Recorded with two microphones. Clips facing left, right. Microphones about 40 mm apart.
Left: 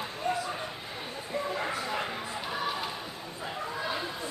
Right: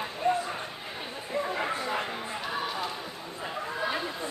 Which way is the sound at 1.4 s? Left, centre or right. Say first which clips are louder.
Right 2 dB; centre.